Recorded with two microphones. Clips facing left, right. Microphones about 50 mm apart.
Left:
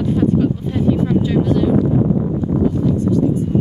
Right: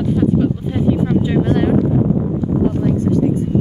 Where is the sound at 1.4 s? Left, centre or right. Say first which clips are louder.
Even; right.